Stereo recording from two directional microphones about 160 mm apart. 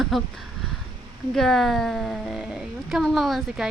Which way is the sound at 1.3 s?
Centre (ahead or behind).